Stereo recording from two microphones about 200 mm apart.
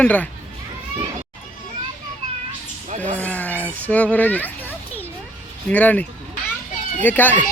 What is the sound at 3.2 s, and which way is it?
A child's voice, 10° left (ahead or behind).